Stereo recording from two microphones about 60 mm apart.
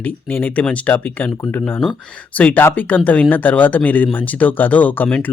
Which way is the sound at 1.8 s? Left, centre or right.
Centre.